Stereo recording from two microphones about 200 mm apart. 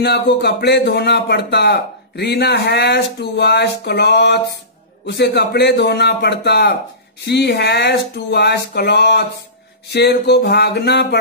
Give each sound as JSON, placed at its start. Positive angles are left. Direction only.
{"t": 0.0, "sound": "speech", "side_deg": 55}